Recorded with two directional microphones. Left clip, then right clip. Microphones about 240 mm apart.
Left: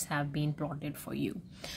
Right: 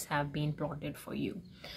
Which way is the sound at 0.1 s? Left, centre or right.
Left.